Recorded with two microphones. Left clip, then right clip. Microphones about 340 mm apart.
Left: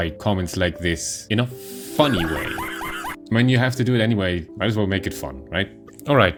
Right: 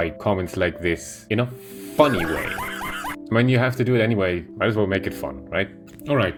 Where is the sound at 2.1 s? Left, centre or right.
Centre.